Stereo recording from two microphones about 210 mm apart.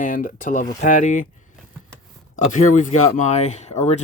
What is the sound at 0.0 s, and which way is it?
Speech, 40° left (ahead or behind).